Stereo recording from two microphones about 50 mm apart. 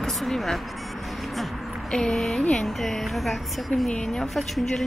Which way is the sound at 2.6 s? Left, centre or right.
Centre.